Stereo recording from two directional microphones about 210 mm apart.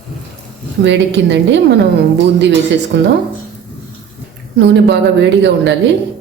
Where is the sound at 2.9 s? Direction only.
55° right (ahead or behind).